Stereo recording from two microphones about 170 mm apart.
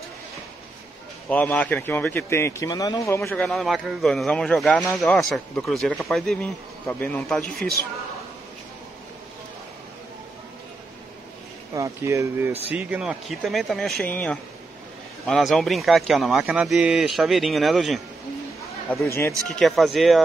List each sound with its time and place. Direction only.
1.3 s a man's voice: 10° left (ahead or behind)
3.3 s speech: centre (ahead or behind)
11.7 s speech: 15° right (ahead or behind); by 18.0 s centre (ahead or behind)
19.0 s a man's voice: 15° left (ahead or behind)
19.5 s speech: centre (ahead or behind)